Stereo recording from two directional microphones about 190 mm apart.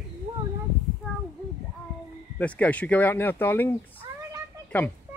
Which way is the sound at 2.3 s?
5° left (ahead or behind).